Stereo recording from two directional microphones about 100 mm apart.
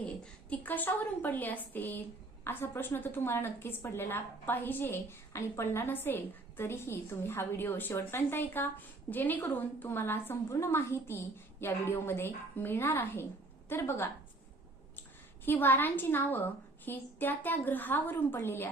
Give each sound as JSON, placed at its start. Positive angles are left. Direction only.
{"t": 0.5, "sound": "a woman's voice", "side_deg": 20}
{"t": 15.4, "sound": "a woman's voice", "side_deg": 20}